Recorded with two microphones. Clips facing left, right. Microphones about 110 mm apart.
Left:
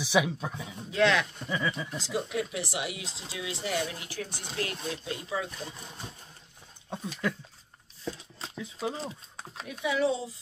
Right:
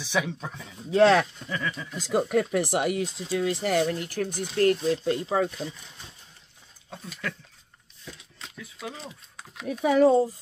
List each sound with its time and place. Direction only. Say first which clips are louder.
0.0 s speech: left 2 dB; 10° left (ahead or behind)
0.9 s speech: right 7 dB; 35° right (ahead or behind)
1.5 s speech: left 1 dB; 10° left (ahead or behind)
2.0 s speech: right 12 dB; 50° right (ahead or behind)
5.7 s speech: even; 40° left (ahead or behind)
6.9 s speech: left 4 dB; 25° left (ahead or behind)
8.0 s a sound: left 7 dB; 30° left (ahead or behind)
9.7 s speech: right 8 dB; 45° right (ahead or behind)